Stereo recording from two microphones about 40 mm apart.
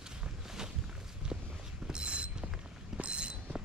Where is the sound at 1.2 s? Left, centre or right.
Right.